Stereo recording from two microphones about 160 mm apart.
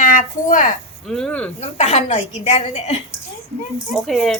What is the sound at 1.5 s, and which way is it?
A woman's voice, 45° left (ahead or behind).